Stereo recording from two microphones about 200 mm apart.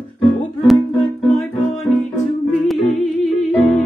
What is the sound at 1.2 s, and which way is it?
Music, centre (ahead or behind).